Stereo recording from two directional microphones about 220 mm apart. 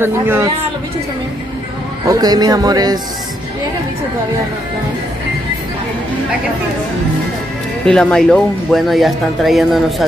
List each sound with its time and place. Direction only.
0.0 s speech: 10° right (ahead or behind)
2.0 s speech: 15° right (ahead or behind)
7.8 s speech: 5° left (ahead or behind)